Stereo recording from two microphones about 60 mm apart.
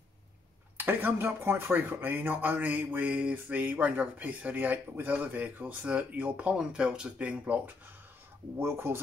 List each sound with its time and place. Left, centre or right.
0.7 s speech: right
6.5 s speech: centre
8.5 s speech: right